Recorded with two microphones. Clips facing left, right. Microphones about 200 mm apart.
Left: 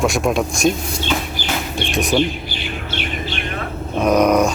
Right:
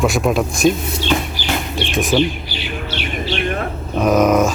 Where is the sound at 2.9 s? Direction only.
50° left (ahead or behind).